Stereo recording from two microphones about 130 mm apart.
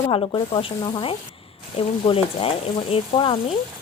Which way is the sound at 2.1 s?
45° left (ahead or behind).